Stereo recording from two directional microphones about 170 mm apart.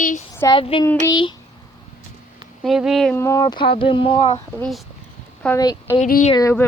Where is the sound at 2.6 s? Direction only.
Centre (ahead or behind).